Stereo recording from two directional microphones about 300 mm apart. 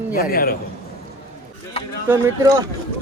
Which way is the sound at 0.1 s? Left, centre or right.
Left.